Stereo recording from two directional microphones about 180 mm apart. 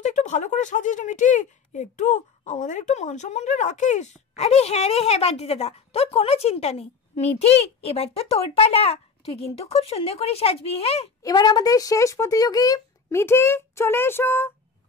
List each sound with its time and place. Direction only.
0.0 s speech: 40° left (ahead or behind)
11.2 s speech: 25° left (ahead or behind)